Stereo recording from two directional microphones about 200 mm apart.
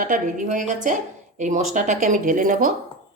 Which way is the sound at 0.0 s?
40° right (ahead or behind).